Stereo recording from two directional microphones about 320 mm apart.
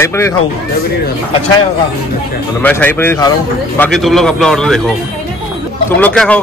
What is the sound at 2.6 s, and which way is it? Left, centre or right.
A man's voice, centre.